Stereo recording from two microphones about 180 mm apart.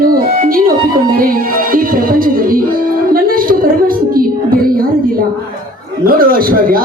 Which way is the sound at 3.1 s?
50° right (ahead or behind).